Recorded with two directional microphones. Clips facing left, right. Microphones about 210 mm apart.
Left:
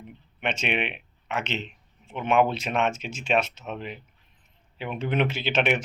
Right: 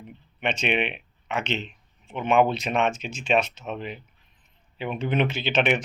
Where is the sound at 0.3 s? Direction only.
5° left (ahead or behind).